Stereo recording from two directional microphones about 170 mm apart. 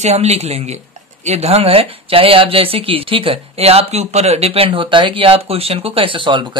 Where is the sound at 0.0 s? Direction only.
40° right (ahead or behind).